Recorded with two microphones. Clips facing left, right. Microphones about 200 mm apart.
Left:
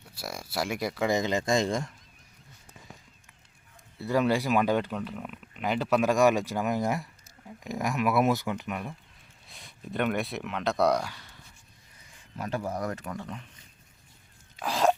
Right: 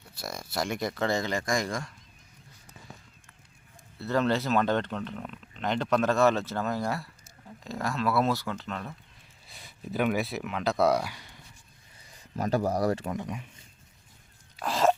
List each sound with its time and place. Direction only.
0.2 s speech: 10° left (ahead or behind); by 1.9 s 25° left (ahead or behind)
3.9 s speech: 10° left (ahead or behind)
9.5 s speech: centre (ahead or behind)
12.0 s speech: 40° right (ahead or behind)
13.1 s speech: 15° right (ahead or behind)
14.6 s a sound: centre (ahead or behind)